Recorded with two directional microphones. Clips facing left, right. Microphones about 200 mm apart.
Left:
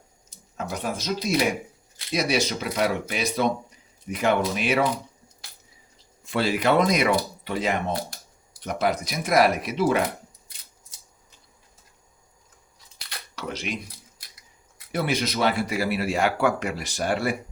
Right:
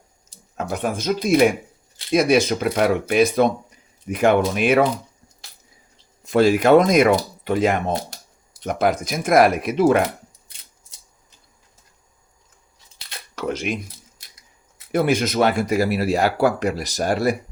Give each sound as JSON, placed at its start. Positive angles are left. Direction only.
{"t": 0.5, "sound": "speech", "side_deg": -55}
{"t": 6.2, "sound": "speech", "side_deg": -45}
{"t": 13.3, "sound": "speech", "side_deg": -50}
{"t": 14.9, "sound": "speech", "side_deg": -50}